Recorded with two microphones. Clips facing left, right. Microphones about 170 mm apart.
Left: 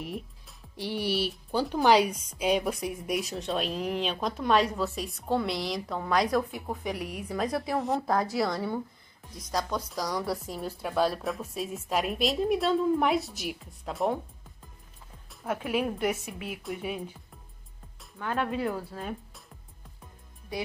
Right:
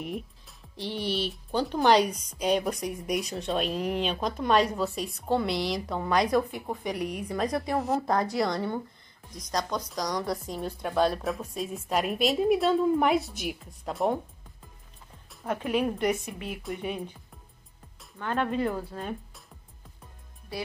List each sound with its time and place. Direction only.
0.0 s speech: centre (ahead or behind)
15.2 s speech: 5° left (ahead or behind)
18.1 s speech: 5° left (ahead or behind)
20.5 s speech: 15° left (ahead or behind)